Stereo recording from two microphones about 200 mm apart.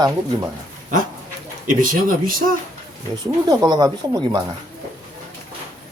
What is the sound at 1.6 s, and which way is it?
Speech, 45° right (ahead or behind).